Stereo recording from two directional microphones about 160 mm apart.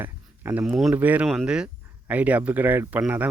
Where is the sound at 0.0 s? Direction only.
10° right (ahead or behind).